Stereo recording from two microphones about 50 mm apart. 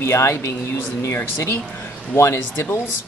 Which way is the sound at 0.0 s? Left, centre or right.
Left.